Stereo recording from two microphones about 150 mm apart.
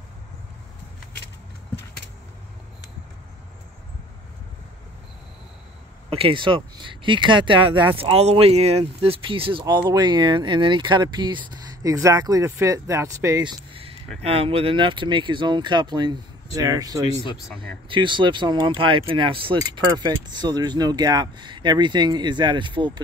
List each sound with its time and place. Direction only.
6.0 s speech: 40° right (ahead or behind)